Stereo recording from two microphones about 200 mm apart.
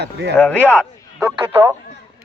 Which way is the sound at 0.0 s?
55° right (ahead or behind).